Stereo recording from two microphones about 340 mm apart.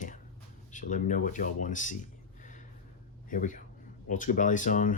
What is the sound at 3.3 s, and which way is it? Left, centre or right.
Speech, left.